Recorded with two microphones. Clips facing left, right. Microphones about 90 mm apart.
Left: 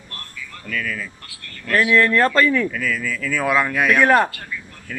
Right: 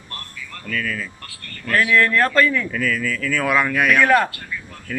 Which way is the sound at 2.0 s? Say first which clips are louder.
Left 1 dB; 25° left (ahead or behind).